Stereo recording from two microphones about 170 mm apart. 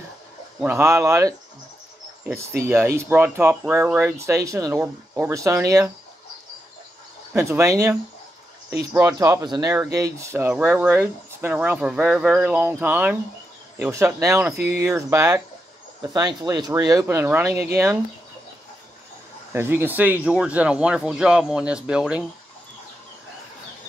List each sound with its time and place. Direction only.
0.6 s speech: 10° right (ahead or behind)
2.7 s speech: 15° right (ahead or behind)
7.3 s speech: 15° right (ahead or behind)
19.5 s speech: 15° right (ahead or behind)